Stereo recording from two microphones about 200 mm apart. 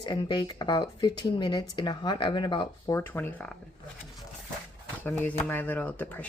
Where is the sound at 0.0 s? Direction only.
25° left (ahead or behind).